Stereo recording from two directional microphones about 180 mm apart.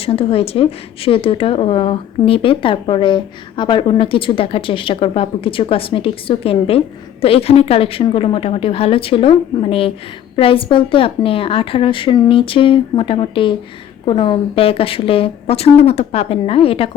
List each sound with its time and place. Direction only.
0.0 s a woman's voice: 30° left (ahead or behind)